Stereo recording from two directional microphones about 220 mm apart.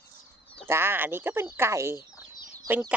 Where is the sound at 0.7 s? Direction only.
10° right (ahead or behind).